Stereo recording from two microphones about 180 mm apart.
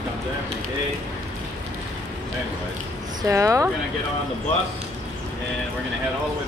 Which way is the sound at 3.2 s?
15° right (ahead or behind).